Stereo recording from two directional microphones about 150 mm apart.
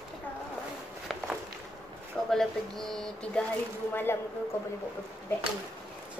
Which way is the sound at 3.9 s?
15° left (ahead or behind).